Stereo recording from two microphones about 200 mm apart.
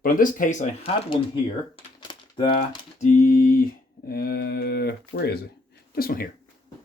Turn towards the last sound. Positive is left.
turn(degrees=45)  # may be behind; listen again after turning